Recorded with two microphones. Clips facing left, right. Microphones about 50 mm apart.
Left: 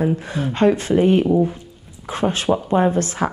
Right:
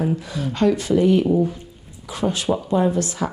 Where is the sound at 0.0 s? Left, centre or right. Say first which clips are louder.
Left 3 dB; left.